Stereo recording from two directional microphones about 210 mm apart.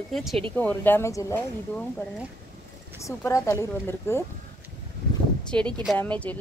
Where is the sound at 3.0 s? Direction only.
15° left (ahead or behind).